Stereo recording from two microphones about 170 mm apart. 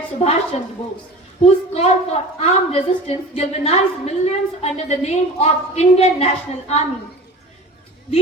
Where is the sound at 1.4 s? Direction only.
40° left (ahead or behind).